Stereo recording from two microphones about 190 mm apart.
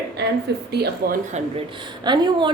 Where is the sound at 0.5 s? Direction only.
60° right (ahead or behind).